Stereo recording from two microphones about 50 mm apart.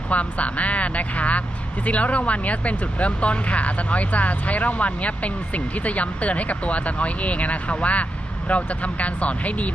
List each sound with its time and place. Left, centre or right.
0.1 s speech: left